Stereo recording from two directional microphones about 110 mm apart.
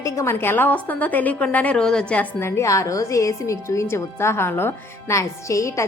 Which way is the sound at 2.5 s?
25° left (ahead or behind).